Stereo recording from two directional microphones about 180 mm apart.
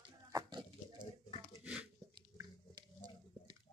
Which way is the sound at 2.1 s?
20° right (ahead or behind).